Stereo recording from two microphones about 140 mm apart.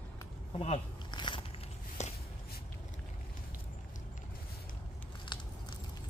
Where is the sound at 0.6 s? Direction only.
40° left (ahead or behind).